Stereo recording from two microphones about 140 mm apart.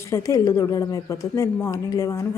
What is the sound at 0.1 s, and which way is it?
A woman's voice, 25° left (ahead or behind).